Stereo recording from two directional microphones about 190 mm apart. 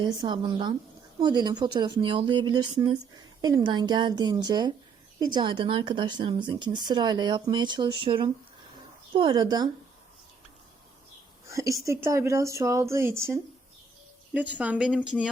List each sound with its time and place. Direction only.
0.0 s speech: 25° right (ahead or behind)
11.4 s a woman's voice: 15° right (ahead or behind)